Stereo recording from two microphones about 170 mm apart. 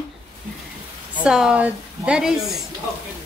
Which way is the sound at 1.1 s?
5° right (ahead or behind).